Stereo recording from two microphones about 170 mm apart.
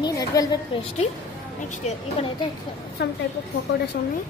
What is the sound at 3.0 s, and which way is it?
Speech, 75° left (ahead or behind).